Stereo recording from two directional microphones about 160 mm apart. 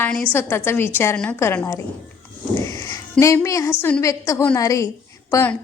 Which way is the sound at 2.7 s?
20° left (ahead or behind).